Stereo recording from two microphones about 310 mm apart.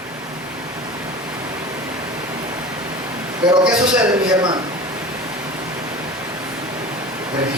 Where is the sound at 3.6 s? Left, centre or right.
Centre.